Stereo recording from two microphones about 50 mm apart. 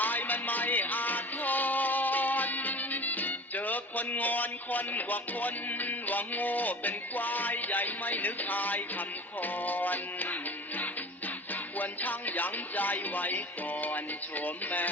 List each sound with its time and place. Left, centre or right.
0.0 s music: left
11.8 s speech: left